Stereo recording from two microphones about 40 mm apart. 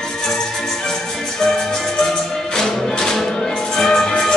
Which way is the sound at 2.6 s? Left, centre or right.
Centre.